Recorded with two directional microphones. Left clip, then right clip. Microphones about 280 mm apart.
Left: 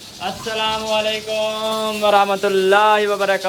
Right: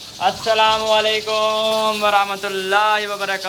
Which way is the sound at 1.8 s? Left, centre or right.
Centre.